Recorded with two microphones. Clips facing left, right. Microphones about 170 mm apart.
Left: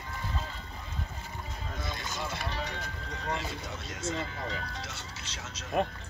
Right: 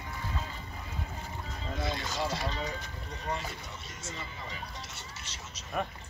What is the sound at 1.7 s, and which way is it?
Vehicle, 50° left (ahead or behind).